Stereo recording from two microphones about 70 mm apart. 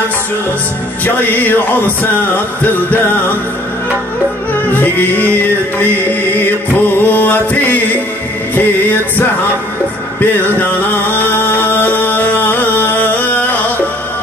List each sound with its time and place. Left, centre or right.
1.0 s music: left
4.7 s music: left